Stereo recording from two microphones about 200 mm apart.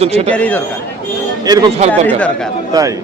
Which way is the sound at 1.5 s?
20° right (ahead or behind).